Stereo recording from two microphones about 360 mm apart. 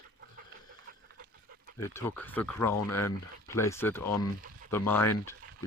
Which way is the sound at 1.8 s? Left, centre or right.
Centre.